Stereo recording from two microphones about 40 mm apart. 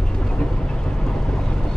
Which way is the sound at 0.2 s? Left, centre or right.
Centre.